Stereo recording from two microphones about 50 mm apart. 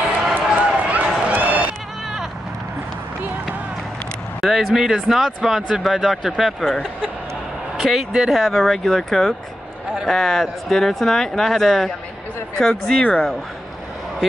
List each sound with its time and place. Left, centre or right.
0.3 s run: right
4.4 s speech: centre
6.6 s speech: centre
7.8 s speech: centre
8.5 s speech: centre